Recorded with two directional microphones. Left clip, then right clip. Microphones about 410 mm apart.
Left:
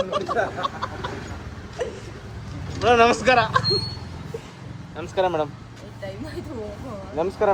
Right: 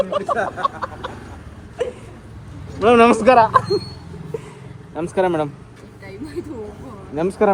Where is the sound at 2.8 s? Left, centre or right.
Centre.